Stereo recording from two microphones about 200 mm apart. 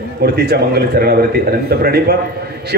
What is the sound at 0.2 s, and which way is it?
A man's voice, 55° right (ahead or behind).